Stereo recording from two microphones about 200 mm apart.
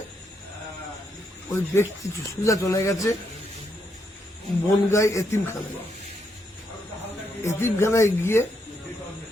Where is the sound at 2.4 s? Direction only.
15° left (ahead or behind).